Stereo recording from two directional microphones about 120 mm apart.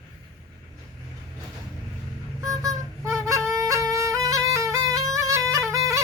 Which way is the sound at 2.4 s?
30° right (ahead or behind).